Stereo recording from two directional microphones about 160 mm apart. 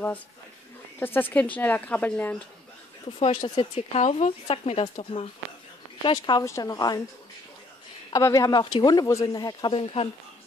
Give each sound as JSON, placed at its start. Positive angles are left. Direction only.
{"t": 0.9, "sound": "speech", "side_deg": 10}
{"t": 3.2, "sound": "speech", "side_deg": 40}
{"t": 8.1, "sound": "speech", "side_deg": 20}